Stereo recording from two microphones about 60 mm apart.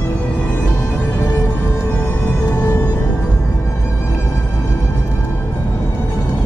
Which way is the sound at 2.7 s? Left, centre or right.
Left.